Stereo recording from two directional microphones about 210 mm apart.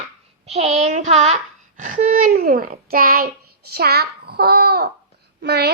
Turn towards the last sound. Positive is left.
turn(degrees=-55)  # may be behind; listen again after turning